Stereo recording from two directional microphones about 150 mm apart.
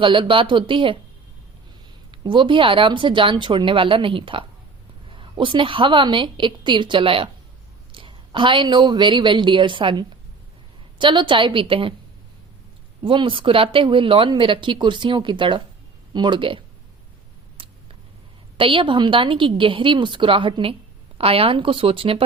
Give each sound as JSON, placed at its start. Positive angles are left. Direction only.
{"t": 0.0, "sound": "speech", "side_deg": -35}
{"t": 2.2, "sound": "speech", "side_deg": -35}
{"t": 13.0, "sound": "speech", "side_deg": -35}
{"t": 17.6, "sound": "a sound", "side_deg": -35}
{"t": 18.5, "sound": "speech", "side_deg": -35}